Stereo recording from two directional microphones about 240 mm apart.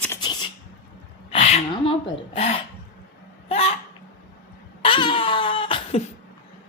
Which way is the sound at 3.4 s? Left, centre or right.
Left.